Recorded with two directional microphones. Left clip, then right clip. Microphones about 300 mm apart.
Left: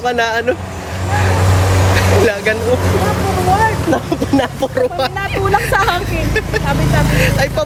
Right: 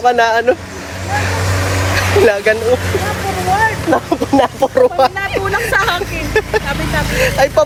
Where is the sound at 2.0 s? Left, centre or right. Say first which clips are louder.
Right 3 dB; left.